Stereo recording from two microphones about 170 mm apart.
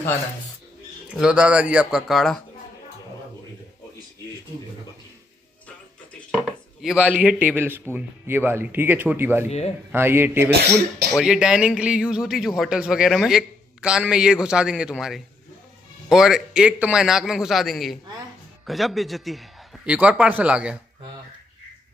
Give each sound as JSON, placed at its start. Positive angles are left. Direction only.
{"t": 1.1, "sound": "a man's voice", "side_deg": -5}
{"t": 6.3, "sound": "a man's voice", "side_deg": -5}